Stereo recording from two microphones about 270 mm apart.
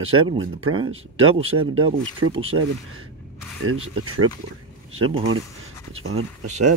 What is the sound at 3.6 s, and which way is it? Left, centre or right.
Speech, right.